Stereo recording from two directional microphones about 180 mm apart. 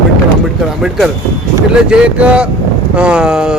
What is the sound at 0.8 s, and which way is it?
A man's voice, centre (ahead or behind).